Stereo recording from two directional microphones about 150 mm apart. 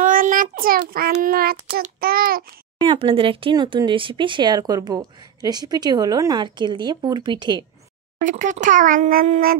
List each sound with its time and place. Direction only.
0.0 s a child's voice: 65° right (ahead or behind); by 1.8 s 90° right
2.0 s a child's voice: 80° right
2.8 s speech: 40° right (ahead or behind)
8.2 s a child's voice: 60° right (ahead or behind)